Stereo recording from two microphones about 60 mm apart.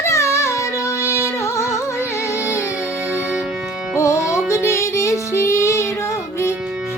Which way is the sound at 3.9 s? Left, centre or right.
Left.